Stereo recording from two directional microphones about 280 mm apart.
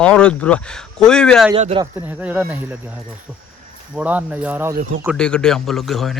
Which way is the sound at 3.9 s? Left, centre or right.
Centre.